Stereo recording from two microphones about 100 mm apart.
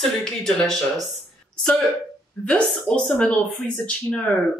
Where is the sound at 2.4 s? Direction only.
10° left (ahead or behind).